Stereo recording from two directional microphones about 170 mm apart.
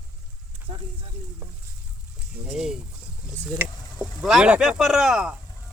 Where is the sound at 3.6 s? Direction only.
10° right (ahead or behind).